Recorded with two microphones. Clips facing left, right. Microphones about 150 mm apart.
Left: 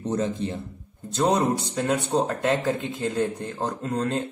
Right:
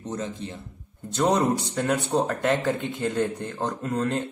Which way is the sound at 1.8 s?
25° left (ahead or behind).